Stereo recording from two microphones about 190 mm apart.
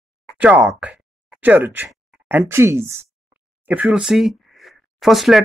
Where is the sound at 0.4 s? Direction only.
5° right (ahead or behind).